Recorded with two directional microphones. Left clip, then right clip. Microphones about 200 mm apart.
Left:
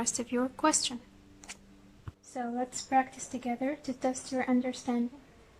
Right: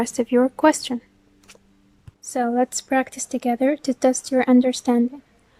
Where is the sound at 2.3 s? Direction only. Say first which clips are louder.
Right 14 dB; 55° right (ahead or behind).